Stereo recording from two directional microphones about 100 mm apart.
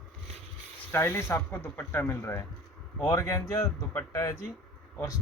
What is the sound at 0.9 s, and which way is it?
Speech, 20° left (ahead or behind).